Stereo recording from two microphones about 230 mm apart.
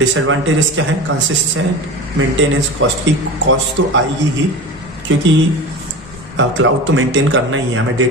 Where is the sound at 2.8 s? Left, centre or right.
Right.